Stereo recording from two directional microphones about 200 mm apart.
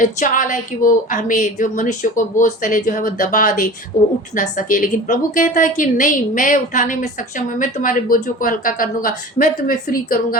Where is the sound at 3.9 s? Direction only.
15° left (ahead or behind).